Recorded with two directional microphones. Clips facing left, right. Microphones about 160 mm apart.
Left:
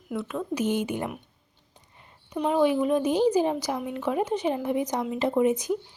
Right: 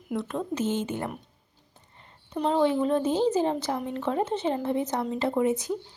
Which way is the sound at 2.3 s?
10° left (ahead or behind).